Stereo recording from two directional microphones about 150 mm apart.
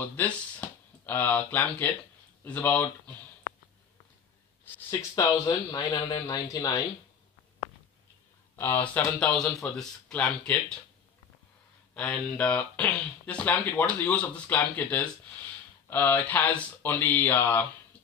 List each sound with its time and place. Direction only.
0.0 s speech: 10° left (ahead or behind)
5.2 s speech: 25° left (ahead or behind)
8.5 s speech: 15° left (ahead or behind)
11.9 s speech: 10° left (ahead or behind)